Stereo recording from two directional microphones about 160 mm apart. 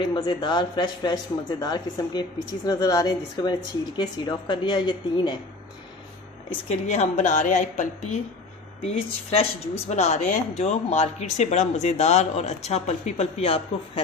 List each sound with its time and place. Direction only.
0.1 s a man's voice: 30° left (ahead or behind)
6.5 s speech: 45° left (ahead or behind)
8.8 s speech: 40° left (ahead or behind)